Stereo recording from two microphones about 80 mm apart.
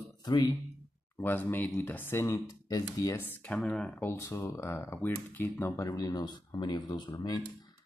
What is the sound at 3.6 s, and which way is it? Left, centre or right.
Speech, centre.